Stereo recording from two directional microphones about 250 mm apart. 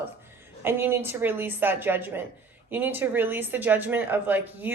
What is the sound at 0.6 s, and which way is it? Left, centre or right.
A woman's voice, centre.